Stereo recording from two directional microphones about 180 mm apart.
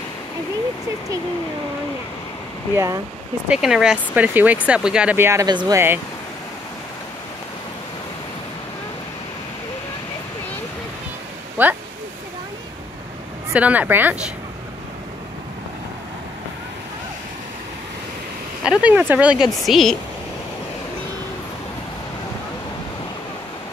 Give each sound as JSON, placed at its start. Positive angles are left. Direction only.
{"t": 2.7, "sound": "speech", "side_deg": -15}
{"t": 3.4, "sound": "speech", "side_deg": -5}
{"t": 11.6, "sound": "speech", "side_deg": -10}
{"t": 13.5, "sound": "speech", "side_deg": -10}
{"t": 18.6, "sound": "speech", "side_deg": -5}